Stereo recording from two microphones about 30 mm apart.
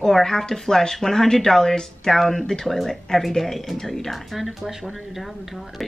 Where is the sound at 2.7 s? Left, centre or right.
Centre.